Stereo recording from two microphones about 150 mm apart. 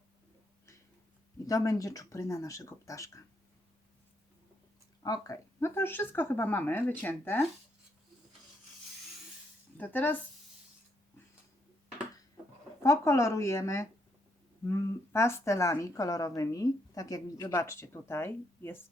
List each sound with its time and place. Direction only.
1.5 s a woman's voice: 25° left (ahead or behind)
5.0 s speech: 25° left (ahead or behind)
9.7 s speech: 10° left (ahead or behind)
12.8 s a woman's voice: 20° left (ahead or behind)